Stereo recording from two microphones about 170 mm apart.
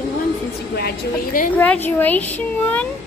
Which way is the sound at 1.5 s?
10° left (ahead or behind).